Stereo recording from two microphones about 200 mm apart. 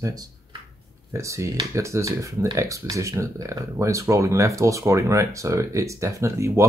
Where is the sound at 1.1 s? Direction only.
15° right (ahead or behind).